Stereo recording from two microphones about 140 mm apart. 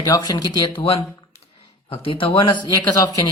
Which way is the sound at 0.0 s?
25° left (ahead or behind).